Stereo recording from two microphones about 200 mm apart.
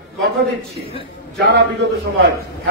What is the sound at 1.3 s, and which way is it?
Speech, 55° right (ahead or behind).